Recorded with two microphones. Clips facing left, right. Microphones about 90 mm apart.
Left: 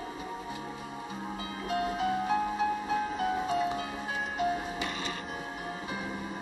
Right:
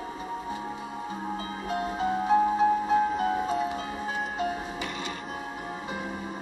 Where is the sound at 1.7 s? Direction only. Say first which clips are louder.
Right 1 dB; 30° right (ahead or behind).